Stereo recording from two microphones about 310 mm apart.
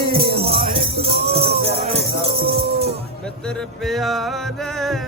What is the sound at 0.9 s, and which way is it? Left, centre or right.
Music, right.